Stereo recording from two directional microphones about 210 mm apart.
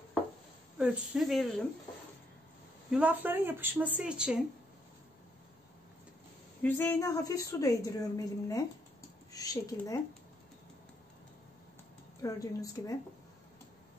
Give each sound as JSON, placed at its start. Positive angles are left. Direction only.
{"t": 0.7, "sound": "speech", "side_deg": 0}
{"t": 2.9, "sound": "speech", "side_deg": -5}
{"t": 6.6, "sound": "a woman's voice", "side_deg": 10}
{"t": 12.2, "sound": "a woman's voice", "side_deg": 15}